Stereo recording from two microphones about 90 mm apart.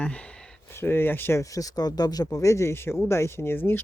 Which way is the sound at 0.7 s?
25° left (ahead or behind).